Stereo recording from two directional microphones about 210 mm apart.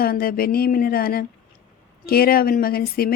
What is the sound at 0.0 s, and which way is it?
Speech, 45° left (ahead or behind).